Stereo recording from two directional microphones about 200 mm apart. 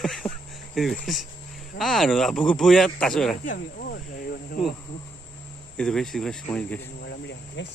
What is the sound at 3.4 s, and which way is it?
Cricket, 45° left (ahead or behind).